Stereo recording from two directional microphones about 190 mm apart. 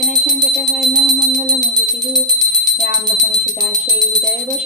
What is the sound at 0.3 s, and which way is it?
Music, 20° right (ahead or behind).